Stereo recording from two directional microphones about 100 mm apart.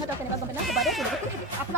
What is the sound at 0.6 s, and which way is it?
Speech, centre (ahead or behind).